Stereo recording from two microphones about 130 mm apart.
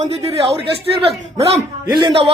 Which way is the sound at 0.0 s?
50° right (ahead or behind).